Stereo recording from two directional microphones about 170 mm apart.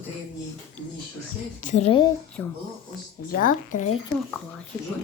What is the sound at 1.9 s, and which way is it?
Speech, 25° left (ahead or behind).